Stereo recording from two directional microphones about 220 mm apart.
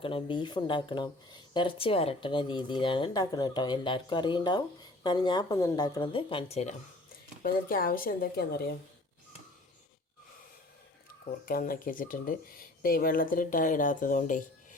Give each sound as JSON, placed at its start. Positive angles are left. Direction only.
{"t": 0.0, "sound": "speech", "side_deg": 25}
{"t": 7.4, "sound": "speech", "side_deg": 40}
{"t": 11.4, "sound": "speech", "side_deg": 40}